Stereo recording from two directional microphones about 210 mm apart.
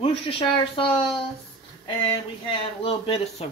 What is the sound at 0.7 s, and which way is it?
Speech, 25° left (ahead or behind).